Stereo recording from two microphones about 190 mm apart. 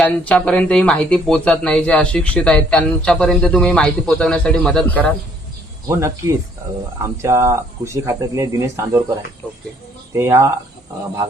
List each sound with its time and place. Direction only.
0.0 s speech: 5° left (ahead or behind)
5.9 s speech: 15° right (ahead or behind)